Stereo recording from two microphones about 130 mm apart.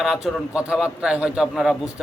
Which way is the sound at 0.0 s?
5° right (ahead or behind).